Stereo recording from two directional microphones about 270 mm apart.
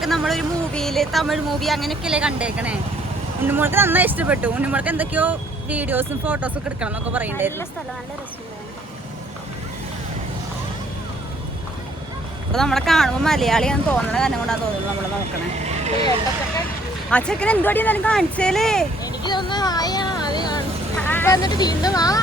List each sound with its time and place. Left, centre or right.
0.0 s speech: centre
12.5 s speech: centre
15.5 s speech: right
17.1 s speech: centre
19.0 s speech: centre